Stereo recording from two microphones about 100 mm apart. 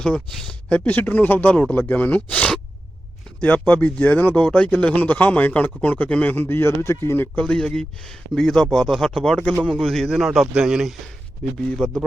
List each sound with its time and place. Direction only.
0.0 s speech: 5° left (ahead or behind)
3.6 s speech: 10° left (ahead or behind)
7.4 s speech: 5° left (ahead or behind)